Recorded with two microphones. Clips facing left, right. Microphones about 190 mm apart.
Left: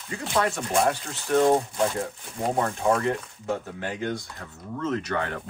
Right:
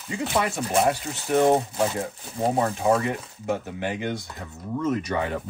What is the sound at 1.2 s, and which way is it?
Speech, 20° right (ahead or behind).